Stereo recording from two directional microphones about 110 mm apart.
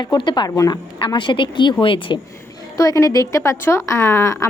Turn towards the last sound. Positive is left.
turn(degrees=30)  # may be behind; listen again after turning